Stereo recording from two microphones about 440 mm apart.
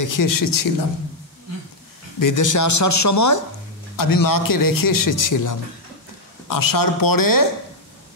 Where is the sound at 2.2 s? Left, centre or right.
Left.